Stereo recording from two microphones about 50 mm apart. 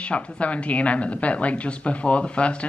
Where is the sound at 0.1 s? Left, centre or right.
Left.